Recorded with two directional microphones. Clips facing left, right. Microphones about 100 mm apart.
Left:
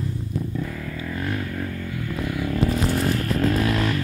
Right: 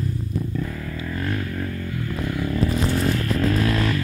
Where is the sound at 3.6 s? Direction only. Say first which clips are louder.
Right 1 dB; 5° left (ahead or behind).